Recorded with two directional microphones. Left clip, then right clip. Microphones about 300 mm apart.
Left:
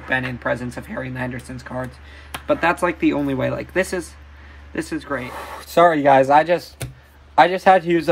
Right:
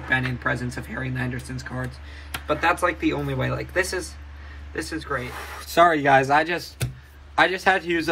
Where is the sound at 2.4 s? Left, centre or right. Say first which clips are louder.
Left 3 dB; left.